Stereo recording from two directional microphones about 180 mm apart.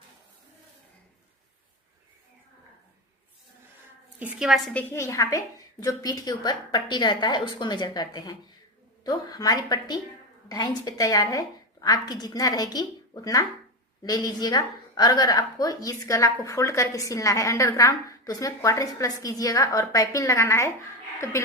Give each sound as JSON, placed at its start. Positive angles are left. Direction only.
{"t": 4.2, "sound": "a woman's voice", "side_deg": -5}